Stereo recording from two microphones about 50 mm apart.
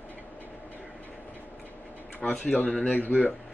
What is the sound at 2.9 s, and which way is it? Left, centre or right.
Speech, left.